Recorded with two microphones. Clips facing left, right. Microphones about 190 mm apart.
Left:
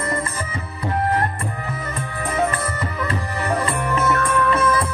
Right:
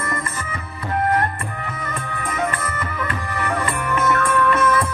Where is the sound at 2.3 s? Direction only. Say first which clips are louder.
Left 3 dB; 35° left (ahead or behind).